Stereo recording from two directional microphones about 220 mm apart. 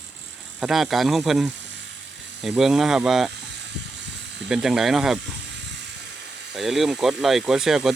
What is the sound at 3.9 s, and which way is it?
Electric shaver, 55° right (ahead or behind).